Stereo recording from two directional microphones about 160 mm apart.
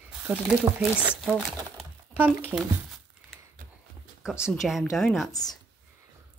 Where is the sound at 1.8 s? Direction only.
10° right (ahead or behind).